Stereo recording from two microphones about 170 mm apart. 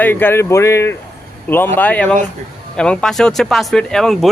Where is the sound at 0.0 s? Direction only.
10° left (ahead or behind).